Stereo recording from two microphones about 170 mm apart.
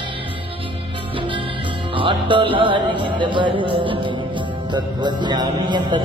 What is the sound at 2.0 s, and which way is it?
A man's voice, 30° right (ahead or behind).